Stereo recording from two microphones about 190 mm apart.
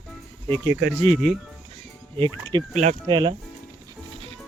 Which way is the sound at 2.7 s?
40° right (ahead or behind).